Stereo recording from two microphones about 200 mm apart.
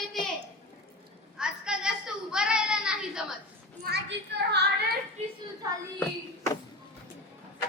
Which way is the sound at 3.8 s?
55° right (ahead or behind).